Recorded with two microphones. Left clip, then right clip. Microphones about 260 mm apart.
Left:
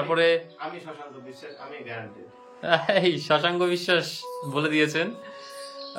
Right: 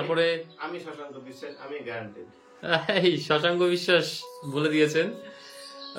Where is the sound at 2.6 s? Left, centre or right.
Centre.